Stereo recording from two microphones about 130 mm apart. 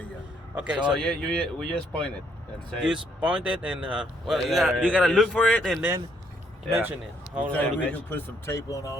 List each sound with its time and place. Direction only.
0.5 s a man's voice: 10° right (ahead or behind)
0.9 s speech: 5° left (ahead or behind)
2.8 s a man's voice: 10° right (ahead or behind)
6.7 s speech: 20° right (ahead or behind)
7.5 s a man's voice: 10° left (ahead or behind)